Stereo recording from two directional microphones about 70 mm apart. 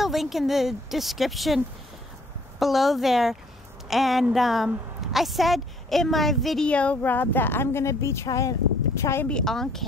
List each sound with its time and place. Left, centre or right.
0.0 s a woman's voice: centre
2.6 s a woman's voice: centre
6.7 s a woman's voice: centre
7.0 s speech: left
8.3 s speech: left
9.3 s a woman's voice: centre